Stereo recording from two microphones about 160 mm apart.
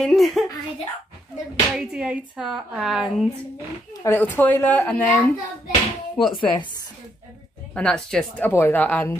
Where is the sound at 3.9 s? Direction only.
15° left (ahead or behind).